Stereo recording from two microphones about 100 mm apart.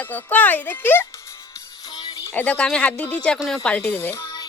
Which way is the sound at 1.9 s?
40° left (ahead or behind).